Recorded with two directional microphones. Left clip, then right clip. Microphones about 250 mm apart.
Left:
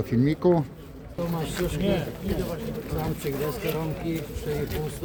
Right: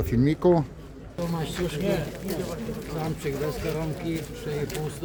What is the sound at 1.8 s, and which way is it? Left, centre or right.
Speech, left.